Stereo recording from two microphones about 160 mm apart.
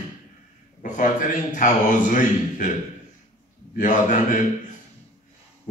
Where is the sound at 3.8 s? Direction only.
55° left (ahead or behind).